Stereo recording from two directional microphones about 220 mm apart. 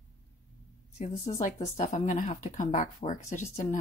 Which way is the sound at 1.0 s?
35° left (ahead or behind).